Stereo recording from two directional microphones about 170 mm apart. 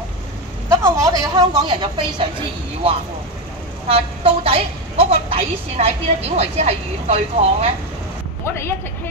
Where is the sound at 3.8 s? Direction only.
35° right (ahead or behind).